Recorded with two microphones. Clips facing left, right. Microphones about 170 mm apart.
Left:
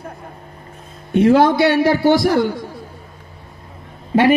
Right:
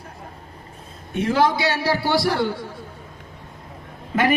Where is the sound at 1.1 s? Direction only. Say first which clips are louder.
Left 8 dB; 60° left (ahead or behind).